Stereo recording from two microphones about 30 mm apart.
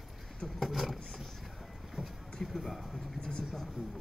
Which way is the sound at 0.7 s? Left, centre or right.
Centre.